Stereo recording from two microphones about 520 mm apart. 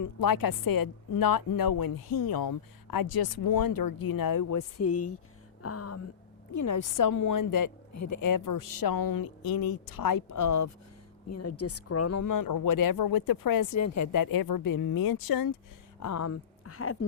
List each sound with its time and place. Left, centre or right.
0.0 s a woman's voice: left
5.6 s a sound: left
6.5 s a woman's voice: left